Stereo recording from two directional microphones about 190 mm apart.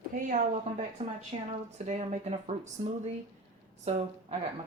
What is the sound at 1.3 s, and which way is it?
Speech, 35° right (ahead or behind).